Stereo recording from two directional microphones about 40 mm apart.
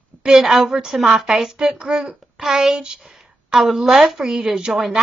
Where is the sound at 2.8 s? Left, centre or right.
Centre.